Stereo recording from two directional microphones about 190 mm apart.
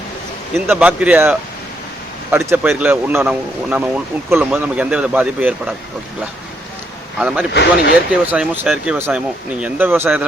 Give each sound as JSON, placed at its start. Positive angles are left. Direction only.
{"t": 0.7, "sound": "speech", "side_deg": -5}
{"t": 7.2, "sound": "speech", "side_deg": -5}
{"t": 7.5, "sound": "speech", "side_deg": 65}
{"t": 8.3, "sound": "speech", "side_deg": -5}